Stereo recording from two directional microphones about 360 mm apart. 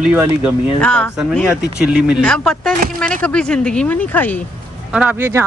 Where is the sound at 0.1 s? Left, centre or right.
Centre.